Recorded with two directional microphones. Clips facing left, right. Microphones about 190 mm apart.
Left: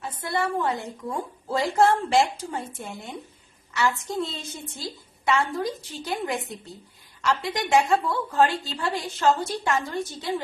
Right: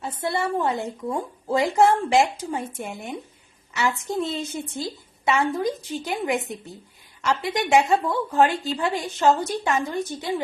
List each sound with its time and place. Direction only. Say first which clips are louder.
0.0 s a woman's voice: right 2 dB; 25° right (ahead or behind)